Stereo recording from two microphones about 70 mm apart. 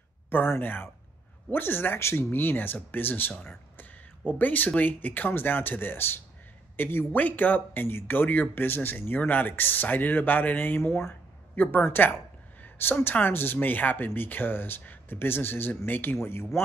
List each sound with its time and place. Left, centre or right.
0.3 s speech: left
11.0 s a sound: left
11.7 s speech: left